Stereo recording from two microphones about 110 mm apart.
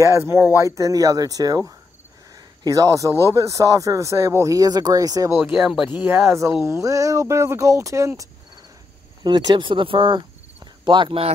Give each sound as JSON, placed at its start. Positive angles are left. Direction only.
{"t": 0.0, "sound": "speech", "side_deg": -25}
{"t": 9.2, "sound": "speech", "side_deg": -40}